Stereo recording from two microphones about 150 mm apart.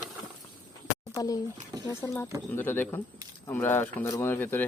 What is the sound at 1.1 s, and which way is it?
Speech, 25° left (ahead or behind).